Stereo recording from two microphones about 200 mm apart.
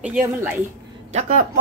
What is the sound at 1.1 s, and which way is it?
Speech, 40° right (ahead or behind).